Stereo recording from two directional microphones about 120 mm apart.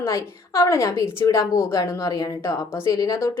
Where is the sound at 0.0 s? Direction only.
25° left (ahead or behind).